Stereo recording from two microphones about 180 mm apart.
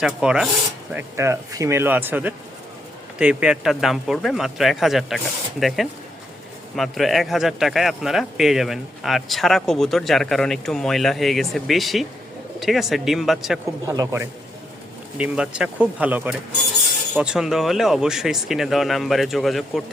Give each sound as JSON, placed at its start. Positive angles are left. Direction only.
{"t": 0.0, "sound": "speech", "side_deg": -5}
{"t": 0.9, "sound": "speech", "side_deg": -15}
{"t": 13.8, "sound": "speech", "side_deg": -20}
{"t": 15.2, "sound": "speech", "side_deg": -5}